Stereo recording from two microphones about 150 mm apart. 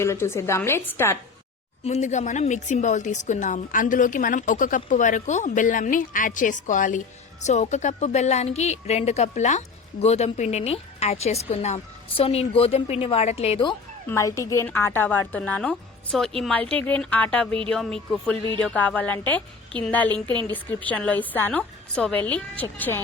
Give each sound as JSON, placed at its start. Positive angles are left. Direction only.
{"t": 0.0, "sound": "a woman's voice", "side_deg": 15}
{"t": 1.8, "sound": "speech", "side_deg": 50}
{"t": 14.1, "sound": "a woman's voice", "side_deg": 20}